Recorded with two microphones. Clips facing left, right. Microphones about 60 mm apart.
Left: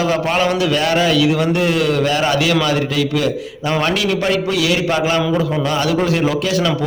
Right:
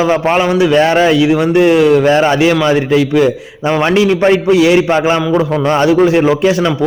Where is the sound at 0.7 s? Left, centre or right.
Right.